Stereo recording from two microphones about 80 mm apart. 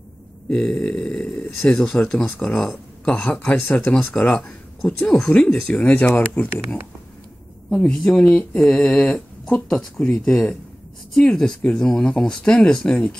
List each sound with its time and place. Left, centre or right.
0.5 s speech: centre
4.8 s speech: centre